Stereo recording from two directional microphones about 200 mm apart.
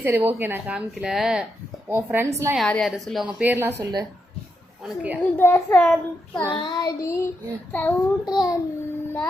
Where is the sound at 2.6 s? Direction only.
Centre (ahead or behind).